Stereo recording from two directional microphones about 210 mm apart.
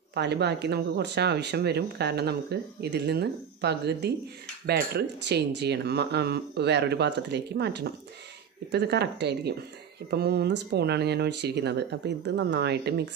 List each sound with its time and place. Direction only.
0.1 s speech: 55° right (ahead or behind)